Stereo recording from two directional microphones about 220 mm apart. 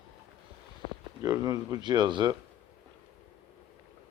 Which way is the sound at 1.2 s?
15° right (ahead or behind).